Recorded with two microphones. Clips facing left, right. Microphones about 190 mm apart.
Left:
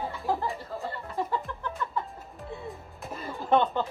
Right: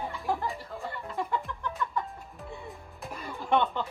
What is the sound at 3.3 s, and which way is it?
Music, 40° left (ahead or behind).